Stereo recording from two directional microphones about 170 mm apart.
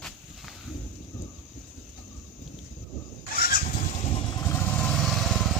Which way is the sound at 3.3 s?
60° left (ahead or behind).